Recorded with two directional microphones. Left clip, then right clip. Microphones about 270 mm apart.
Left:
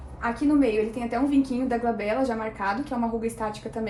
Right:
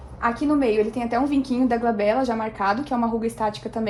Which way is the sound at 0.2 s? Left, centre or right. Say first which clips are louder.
Right 2 dB; right.